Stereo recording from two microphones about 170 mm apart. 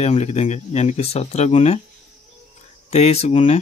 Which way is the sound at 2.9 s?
40° left (ahead or behind).